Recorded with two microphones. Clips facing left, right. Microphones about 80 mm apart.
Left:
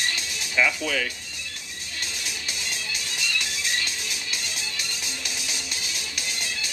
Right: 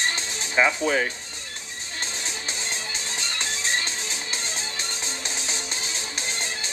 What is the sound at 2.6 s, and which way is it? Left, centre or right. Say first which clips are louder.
Music: right 1 dB; right.